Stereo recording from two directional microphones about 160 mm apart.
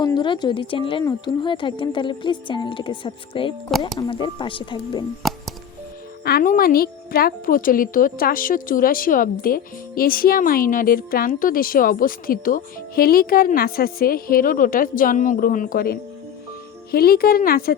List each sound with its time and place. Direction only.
0.0 s speech: 30° left (ahead or behind)
3.7 s speech: centre (ahead or behind)
3.9 s speech: 30° left (ahead or behind)
5.2 s music: centre (ahead or behind)
6.2 s a woman's voice: 65° left (ahead or behind)